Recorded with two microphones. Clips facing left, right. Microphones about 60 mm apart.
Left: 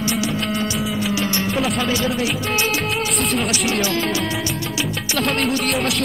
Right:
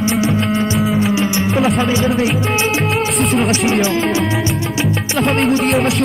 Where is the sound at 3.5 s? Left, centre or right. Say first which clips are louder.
Right 5 dB; right.